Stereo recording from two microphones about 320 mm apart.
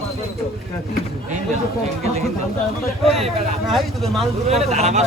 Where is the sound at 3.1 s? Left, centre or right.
Centre.